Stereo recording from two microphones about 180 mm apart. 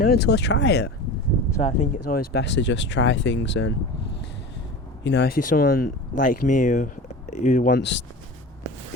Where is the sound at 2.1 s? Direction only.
65° left (ahead or behind).